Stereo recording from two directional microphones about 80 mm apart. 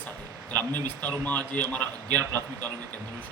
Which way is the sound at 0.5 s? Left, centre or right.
Left.